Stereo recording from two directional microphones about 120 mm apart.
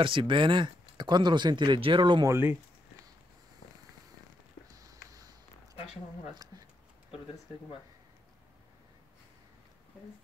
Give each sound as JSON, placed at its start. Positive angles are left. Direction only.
{"t": 0.0, "sound": "speech", "side_deg": -45}
{"t": 2.2, "sound": "speech", "side_deg": -20}
{"t": 4.7, "sound": "a sound", "side_deg": -30}